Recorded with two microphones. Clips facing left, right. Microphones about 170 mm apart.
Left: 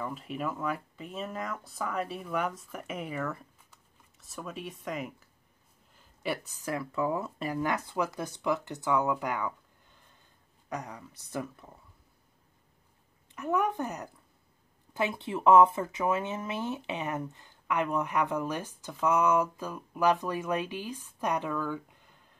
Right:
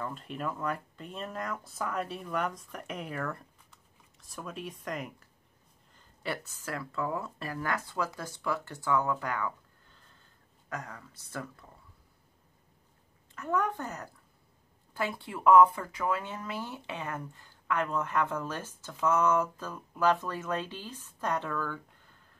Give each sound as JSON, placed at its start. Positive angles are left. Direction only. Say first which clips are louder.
{"t": 0.0, "sound": "speech", "louder": "left 2 dB", "side_deg": 5}
{"t": 5.9, "sound": "speech", "louder": "left 3 dB", "side_deg": 10}
{"t": 13.3, "sound": "speech", "louder": "left 2 dB", "side_deg": 15}